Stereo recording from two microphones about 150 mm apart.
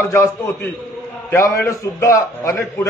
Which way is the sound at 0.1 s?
20° left (ahead or behind).